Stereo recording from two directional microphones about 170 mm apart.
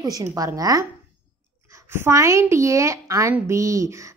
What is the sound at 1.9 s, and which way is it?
A woman's voice, 15° right (ahead or behind).